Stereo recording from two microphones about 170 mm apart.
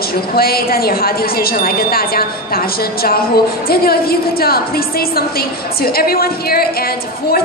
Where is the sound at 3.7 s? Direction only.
65° left (ahead or behind).